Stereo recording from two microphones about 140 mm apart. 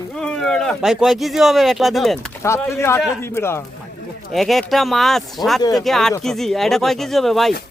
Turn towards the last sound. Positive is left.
turn(degrees=0)  # may be behind; listen again after turning